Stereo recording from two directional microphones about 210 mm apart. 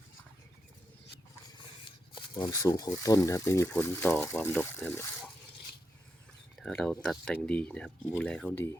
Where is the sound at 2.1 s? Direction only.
20° left (ahead or behind).